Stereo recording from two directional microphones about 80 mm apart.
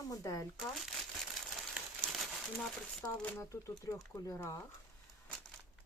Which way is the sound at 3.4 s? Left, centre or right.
Left.